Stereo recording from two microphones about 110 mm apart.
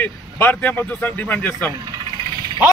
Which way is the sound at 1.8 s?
35° right (ahead or behind).